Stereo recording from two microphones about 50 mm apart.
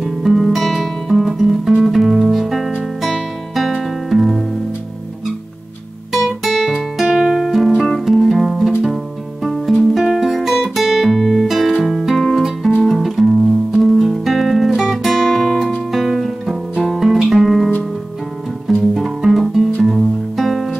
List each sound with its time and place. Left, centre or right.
0.0 s music: centre
6.1 s guitar: centre
6.7 s music: centre
18.7 s music: centre